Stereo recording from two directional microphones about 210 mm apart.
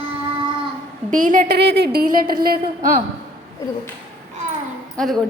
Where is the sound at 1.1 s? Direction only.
40° right (ahead or behind).